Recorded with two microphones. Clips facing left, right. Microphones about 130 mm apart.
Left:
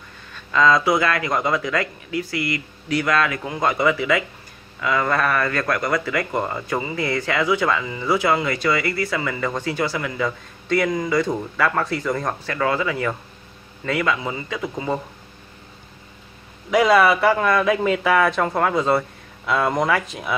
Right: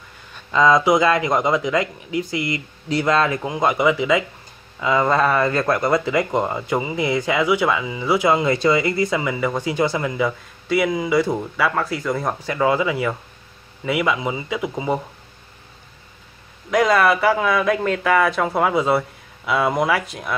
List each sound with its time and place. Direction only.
0.3 s speech: 20° right (ahead or behind)
3.5 s speech: 15° right (ahead or behind)
10.2 s speech: 5° right (ahead or behind)
16.7 s speech: centre (ahead or behind)